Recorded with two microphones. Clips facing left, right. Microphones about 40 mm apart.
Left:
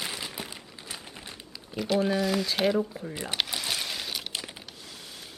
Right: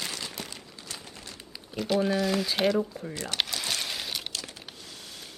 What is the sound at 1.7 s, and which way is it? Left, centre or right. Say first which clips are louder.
Speech: even; centre.